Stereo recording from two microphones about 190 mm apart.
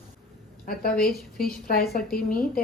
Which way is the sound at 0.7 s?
50° left (ahead or behind).